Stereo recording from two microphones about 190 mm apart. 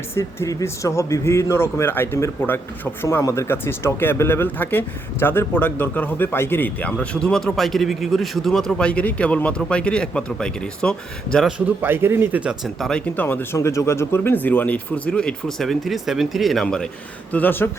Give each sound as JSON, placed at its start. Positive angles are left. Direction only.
{"t": 0.1, "sound": "speech", "side_deg": 15}
{"t": 11.6, "sound": "speech", "side_deg": -10}